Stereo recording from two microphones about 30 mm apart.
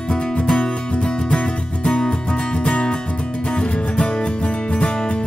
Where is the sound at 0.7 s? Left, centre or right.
Left.